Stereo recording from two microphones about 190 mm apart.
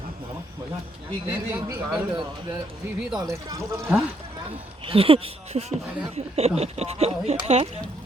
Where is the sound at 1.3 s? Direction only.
10° right (ahead or behind).